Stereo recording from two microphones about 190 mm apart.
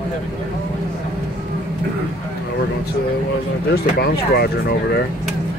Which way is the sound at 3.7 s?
55° left (ahead or behind).